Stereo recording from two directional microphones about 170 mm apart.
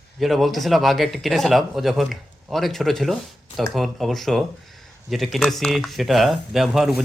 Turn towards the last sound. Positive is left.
turn(degrees=0)  # may be behind; listen again after turning